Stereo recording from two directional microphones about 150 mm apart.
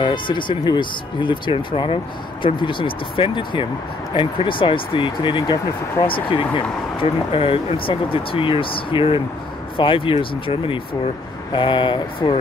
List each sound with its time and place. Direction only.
0.0 s speech: 30° left (ahead or behind)